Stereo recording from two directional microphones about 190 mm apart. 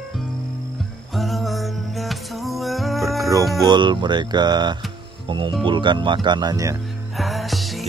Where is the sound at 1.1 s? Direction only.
Centre (ahead or behind).